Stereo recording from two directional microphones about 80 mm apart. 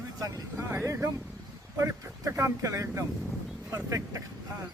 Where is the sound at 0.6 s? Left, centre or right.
Right.